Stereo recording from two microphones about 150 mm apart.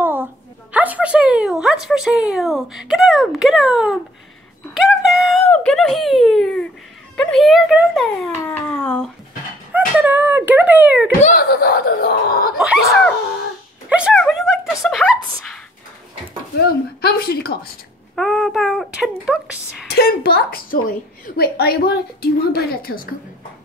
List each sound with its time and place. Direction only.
0.0 s a woman's voice: 15° right (ahead or behind)
8.5 s speech: 15° left (ahead or behind)
9.7 s speech: 10° right (ahead or behind)
11.3 s a woman's voice: 90° left
12.5 s speech: 5° left (ahead or behind)
13.8 s a sound: 10° right (ahead or behind)
14.8 s speech: 5° left (ahead or behind)
16.5 s a woman's voice: 90° left
18.1 s speech: centre (ahead or behind)
19.9 s a woman's voice: 90° left